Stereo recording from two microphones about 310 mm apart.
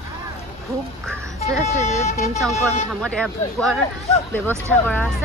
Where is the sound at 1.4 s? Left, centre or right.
Left.